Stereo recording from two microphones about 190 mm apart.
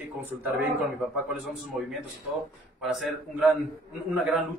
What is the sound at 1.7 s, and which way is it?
A man's voice, centre (ahead or behind).